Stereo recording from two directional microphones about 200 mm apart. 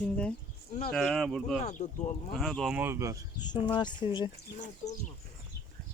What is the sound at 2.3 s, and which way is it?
Speech, centre (ahead or behind).